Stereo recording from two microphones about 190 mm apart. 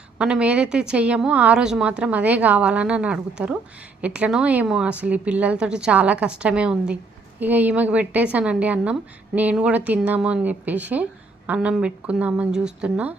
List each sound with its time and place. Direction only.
0.2 s a woman's voice: 5° right (ahead or behind)